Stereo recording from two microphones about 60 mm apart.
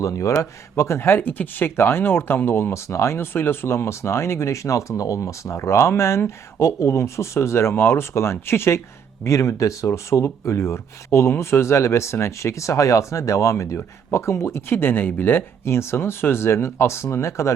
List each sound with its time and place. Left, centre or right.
0.0 s speech: left
0.8 s speech: left
2.7 s speech: left
9.2 s speech: left